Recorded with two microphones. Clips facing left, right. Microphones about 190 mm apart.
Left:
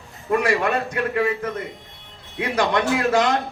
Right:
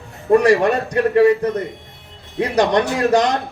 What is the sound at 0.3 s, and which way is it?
A man's voice, 35° right (ahead or behind).